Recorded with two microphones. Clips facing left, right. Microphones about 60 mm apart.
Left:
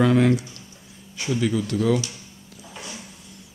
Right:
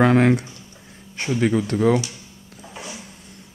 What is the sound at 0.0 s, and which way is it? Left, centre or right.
Speech, right.